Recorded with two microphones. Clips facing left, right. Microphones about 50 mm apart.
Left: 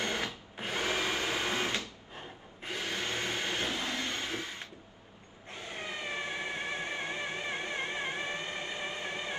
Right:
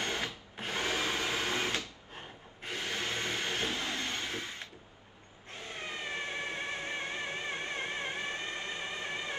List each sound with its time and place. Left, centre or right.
0.0 s drill: left
0.6 s drill: centre
1.1 s printer: centre
2.6 s a sound: centre
3.6 s train: left
4.1 s a sound: left
5.7 s vehicle: centre